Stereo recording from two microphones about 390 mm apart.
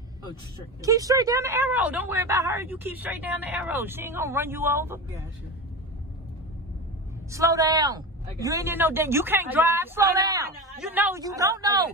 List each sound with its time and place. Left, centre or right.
0.8 s speech: centre
7.2 s speech: centre